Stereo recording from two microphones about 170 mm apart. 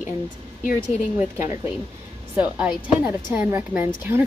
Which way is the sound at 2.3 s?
10° right (ahead or behind).